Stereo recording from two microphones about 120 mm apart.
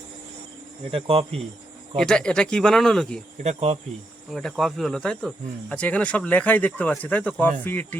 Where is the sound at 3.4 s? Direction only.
65° right (ahead or behind).